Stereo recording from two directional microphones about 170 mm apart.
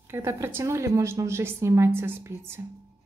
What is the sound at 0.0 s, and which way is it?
A woman's voice, 15° right (ahead or behind).